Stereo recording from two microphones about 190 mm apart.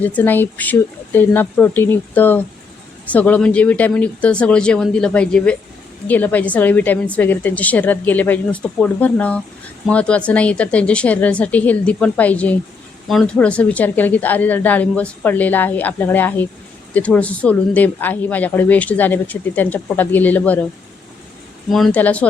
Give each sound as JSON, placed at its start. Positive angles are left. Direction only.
{"t": 0.0, "sound": "speech", "side_deg": 10}
{"t": 21.7, "sound": "speech", "side_deg": 0}